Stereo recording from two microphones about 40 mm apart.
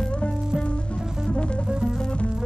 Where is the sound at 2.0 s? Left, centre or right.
Left.